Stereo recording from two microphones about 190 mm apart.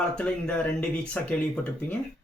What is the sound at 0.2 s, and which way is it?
Speech, 5° left (ahead or behind).